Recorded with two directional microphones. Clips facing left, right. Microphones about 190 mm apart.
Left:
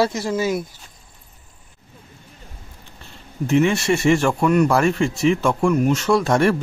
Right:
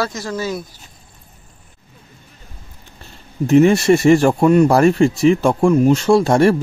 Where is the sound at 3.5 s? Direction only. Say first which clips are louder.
Right 6 dB; 40° right (ahead or behind).